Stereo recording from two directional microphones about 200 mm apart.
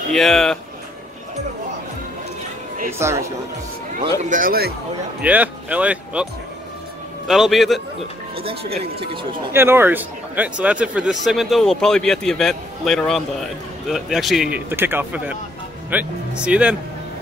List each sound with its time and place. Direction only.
0.1 s speech: centre (ahead or behind)
2.9 s speech: 15° right (ahead or behind)
4.2 s speech: 40° right (ahead or behind)
5.2 s speech: 5° right (ahead or behind)
7.2 s speech: centre (ahead or behind)
8.4 s speech: 30° right (ahead or behind)
9.5 s speech: 10° right (ahead or behind)